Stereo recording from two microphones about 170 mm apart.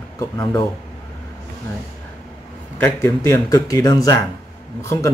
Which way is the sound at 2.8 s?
15° left (ahead or behind).